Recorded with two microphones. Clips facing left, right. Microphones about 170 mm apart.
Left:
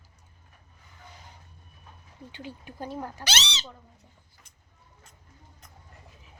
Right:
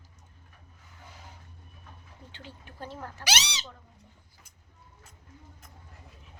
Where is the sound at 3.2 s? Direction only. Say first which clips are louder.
Right 1 dB; 10° right (ahead or behind).